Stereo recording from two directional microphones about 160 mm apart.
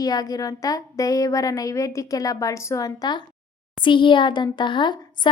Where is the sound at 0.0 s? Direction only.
25° left (ahead or behind).